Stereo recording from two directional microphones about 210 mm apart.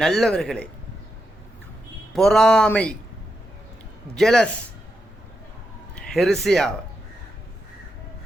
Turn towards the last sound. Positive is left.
turn(degrees=0)  # may be behind; listen again after turning